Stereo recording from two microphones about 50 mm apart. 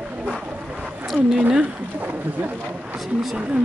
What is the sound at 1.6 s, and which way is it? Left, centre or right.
Speech, right.